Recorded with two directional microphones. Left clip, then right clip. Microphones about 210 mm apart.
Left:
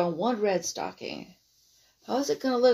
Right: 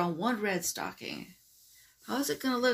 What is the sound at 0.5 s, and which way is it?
Speech, 50° right (ahead or behind).